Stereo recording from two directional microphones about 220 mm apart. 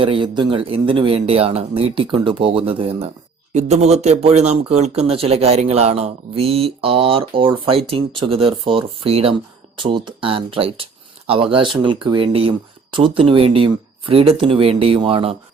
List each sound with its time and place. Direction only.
0.0 s speech: 20° right (ahead or behind)